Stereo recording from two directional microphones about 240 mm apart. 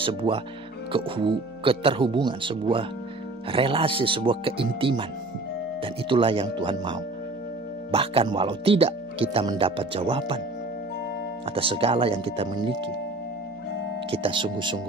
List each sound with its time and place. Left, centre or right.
0.0 s speech: right
11.5 s speech: right
14.1 s speech: right